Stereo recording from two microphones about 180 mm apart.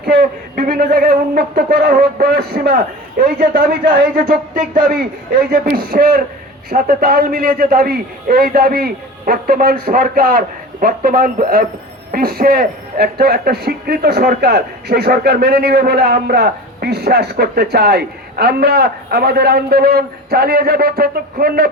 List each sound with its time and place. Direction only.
0.0 s a man's voice: 60° right (ahead or behind)